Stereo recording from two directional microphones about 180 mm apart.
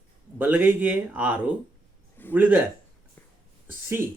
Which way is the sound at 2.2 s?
10° left (ahead or behind).